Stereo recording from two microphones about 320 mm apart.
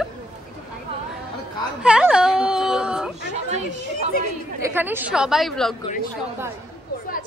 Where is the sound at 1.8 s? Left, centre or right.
Centre.